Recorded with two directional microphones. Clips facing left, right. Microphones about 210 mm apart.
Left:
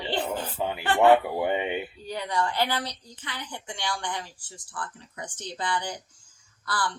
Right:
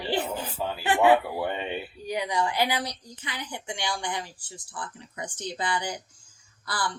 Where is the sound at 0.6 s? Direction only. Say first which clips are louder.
Left 2 dB; 20° left (ahead or behind).